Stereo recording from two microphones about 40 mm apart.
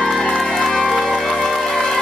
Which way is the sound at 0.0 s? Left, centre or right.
Centre.